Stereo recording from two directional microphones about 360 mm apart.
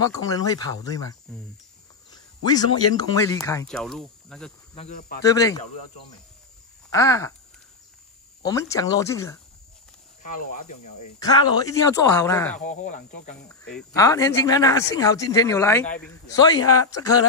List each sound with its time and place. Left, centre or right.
0.0 s speech: centre
2.0 s cricket: centre
2.9 s speech: centre
4.7 s speech: left
5.2 s speech: centre
6.9 s speech: centre
8.4 s speech: centre
10.2 s speech: left
11.1 s speech: centre
12.5 s speech: left
13.5 s speech: centre
16.6 s speech: left